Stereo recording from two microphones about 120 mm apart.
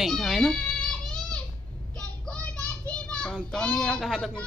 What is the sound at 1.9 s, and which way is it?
Child singing, 10° left (ahead or behind).